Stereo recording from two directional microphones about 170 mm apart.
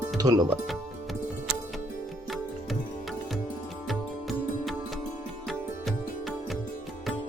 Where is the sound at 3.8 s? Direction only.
Centre (ahead or behind).